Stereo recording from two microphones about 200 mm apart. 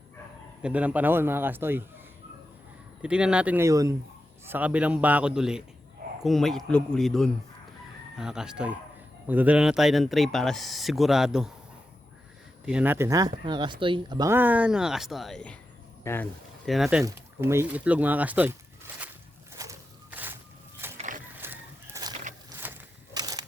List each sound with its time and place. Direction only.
0.6 s speech: 5° right (ahead or behind)
3.0 s speech: 5° right (ahead or behind)
12.6 s speech: 5° right (ahead or behind); by 16.3 s 10° left (ahead or behind)
16.6 s speech: centre (ahead or behind)
17.0 s speech: 15° right (ahead or behind)
19.5 s a sound: 10° right (ahead or behind)
20.8 s vehicle: 10° right (ahead or behind)
21.4 s chicken: 15° right (ahead or behind)
22.4 s a sound: 10° right (ahead or behind)